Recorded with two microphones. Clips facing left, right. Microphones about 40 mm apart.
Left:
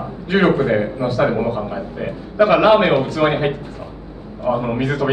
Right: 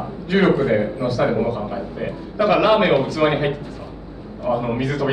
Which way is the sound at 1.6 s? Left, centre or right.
Centre.